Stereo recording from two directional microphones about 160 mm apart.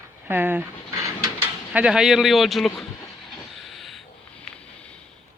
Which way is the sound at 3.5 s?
Centre (ahead or behind).